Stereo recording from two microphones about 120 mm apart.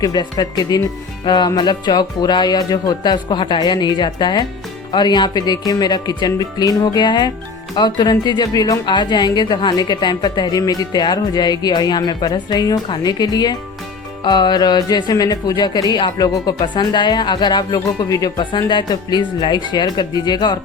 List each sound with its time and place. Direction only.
0.0 s speech: 35° left (ahead or behind)